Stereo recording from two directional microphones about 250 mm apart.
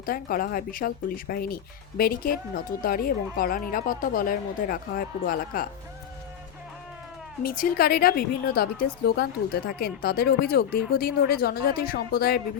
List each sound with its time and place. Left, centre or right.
0.0 s a woman's voice: left
7.4 s a woman's voice: left